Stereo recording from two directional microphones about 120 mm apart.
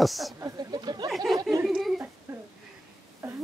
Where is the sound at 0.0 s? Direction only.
Centre (ahead or behind).